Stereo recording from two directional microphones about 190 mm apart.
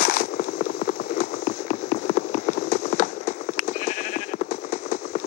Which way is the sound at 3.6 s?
40° left (ahead or behind).